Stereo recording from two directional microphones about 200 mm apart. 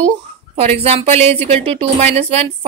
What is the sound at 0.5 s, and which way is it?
Speech, 30° right (ahead or behind).